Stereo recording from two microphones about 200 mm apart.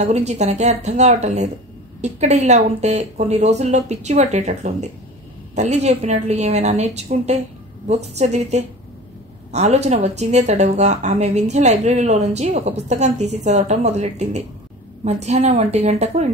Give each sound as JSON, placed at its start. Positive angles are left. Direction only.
{"t": 0.0, "sound": "speech", "side_deg": -35}